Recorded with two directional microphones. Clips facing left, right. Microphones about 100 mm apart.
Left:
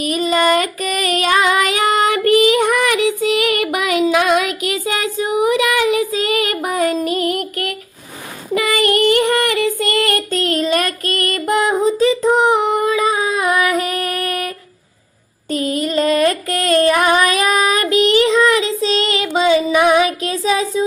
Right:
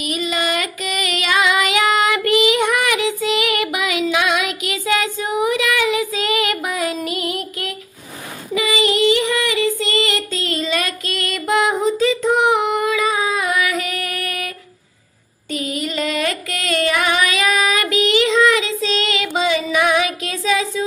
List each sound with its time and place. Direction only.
0.0 s child singing: 40° left (ahead or behind)
11.7 s female singing: 35° left (ahead or behind)
15.4 s a sound: 40° left (ahead or behind)